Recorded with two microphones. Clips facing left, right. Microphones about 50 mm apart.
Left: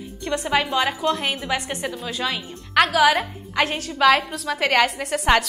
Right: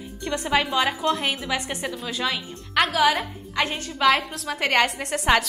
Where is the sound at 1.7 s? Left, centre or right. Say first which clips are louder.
Left 2 dB; centre.